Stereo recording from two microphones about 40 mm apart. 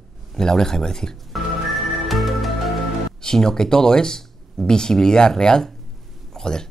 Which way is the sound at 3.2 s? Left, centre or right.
Centre.